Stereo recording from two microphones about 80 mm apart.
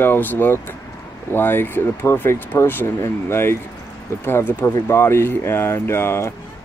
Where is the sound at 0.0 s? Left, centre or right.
Left.